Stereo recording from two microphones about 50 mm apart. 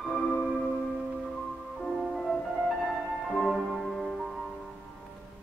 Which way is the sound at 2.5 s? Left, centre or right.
Centre.